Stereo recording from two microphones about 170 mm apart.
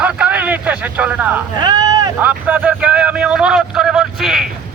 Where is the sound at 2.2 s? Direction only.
10° right (ahead or behind).